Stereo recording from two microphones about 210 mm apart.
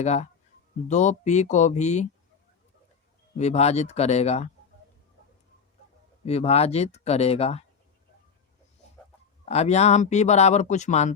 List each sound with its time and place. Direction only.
0.0 s speech: 30° left (ahead or behind)
3.3 s speech: 30° left (ahead or behind)
6.2 s speech: 30° left (ahead or behind)
9.5 s speech: 30° left (ahead or behind)